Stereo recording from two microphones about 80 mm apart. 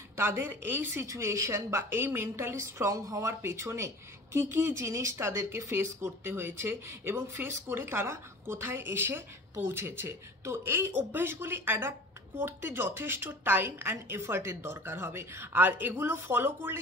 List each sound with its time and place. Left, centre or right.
0.1 s a woman's voice: right
1.0 s a woman's voice: right